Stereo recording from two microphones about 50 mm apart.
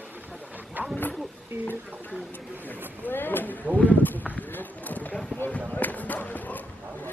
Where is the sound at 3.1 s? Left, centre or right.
Left.